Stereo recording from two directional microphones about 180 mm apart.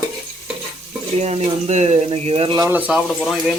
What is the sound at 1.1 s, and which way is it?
Speech, 35° right (ahead or behind).